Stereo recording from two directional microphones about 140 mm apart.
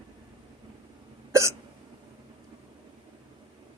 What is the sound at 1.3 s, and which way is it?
Hiccup, 20° right (ahead or behind).